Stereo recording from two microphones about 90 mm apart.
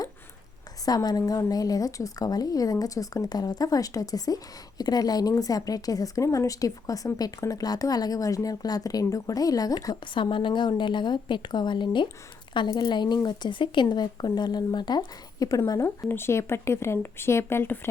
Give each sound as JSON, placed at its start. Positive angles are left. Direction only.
{"t": 0.9, "sound": "a woman's voice", "side_deg": 45}
{"t": 9.9, "sound": "a woman's voice", "side_deg": 65}
{"t": 16.0, "sound": "speech", "side_deg": 25}